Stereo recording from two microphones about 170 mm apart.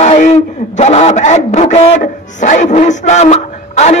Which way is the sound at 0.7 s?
40° left (ahead or behind).